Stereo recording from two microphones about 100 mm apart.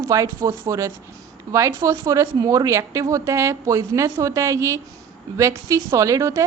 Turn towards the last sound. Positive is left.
turn(degrees=-35)  # may be behind; listen again after turning